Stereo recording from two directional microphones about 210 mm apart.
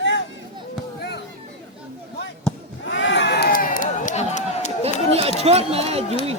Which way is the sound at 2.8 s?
65° left (ahead or behind).